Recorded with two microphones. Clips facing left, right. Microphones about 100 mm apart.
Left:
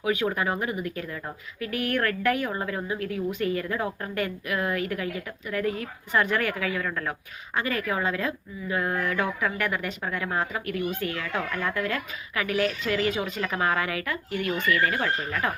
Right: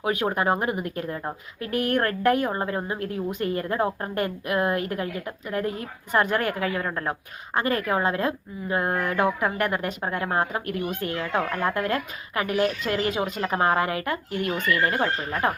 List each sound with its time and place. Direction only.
0.0 s speech: 35° right (ahead or behind)
7.5 s speech: 35° right (ahead or behind)
9.1 s speech: 25° right (ahead or behind)
9.6 s speech: 40° right (ahead or behind)
11.2 s speech: 30° right (ahead or behind)